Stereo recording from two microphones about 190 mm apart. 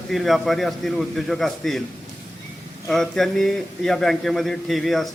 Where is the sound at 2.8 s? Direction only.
Centre (ahead or behind).